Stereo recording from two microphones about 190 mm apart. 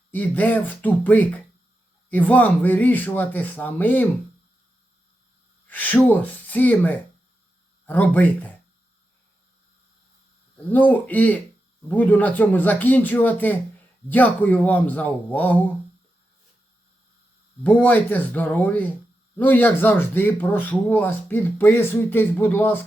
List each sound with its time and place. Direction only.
0.1 s speech: 10° left (ahead or behind)
5.6 s speech: 10° left (ahead or behind)
10.7 s speech: 10° left (ahead or behind)
17.6 s speech: 10° left (ahead or behind)